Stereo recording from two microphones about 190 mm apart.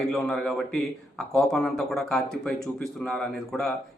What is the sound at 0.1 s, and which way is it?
Speech, 5° left (ahead or behind).